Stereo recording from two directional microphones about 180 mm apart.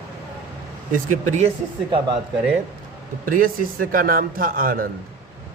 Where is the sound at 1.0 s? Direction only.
45° right (ahead or behind).